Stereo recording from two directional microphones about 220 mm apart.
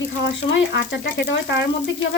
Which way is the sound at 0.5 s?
55° left (ahead or behind).